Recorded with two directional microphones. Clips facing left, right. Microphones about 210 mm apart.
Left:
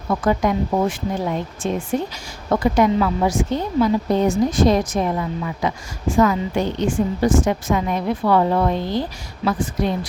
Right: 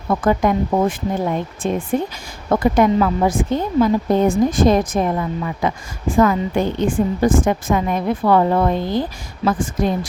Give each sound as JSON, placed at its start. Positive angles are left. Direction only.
{"t": 0.1, "sound": "a woman's voice", "side_deg": -50}